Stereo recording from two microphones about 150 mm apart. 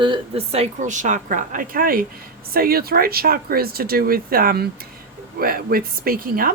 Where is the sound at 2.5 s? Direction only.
85° right.